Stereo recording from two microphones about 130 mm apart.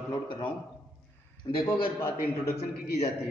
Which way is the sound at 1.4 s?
45° left (ahead or behind).